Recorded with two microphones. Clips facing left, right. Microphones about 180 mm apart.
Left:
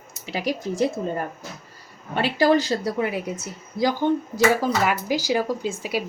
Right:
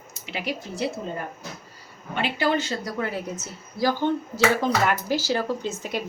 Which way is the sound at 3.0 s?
15° left (ahead or behind).